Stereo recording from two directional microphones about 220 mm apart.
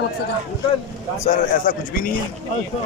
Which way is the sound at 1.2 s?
40° left (ahead or behind).